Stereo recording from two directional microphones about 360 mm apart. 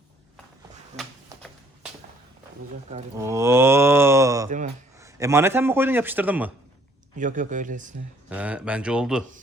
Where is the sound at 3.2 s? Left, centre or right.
Centre.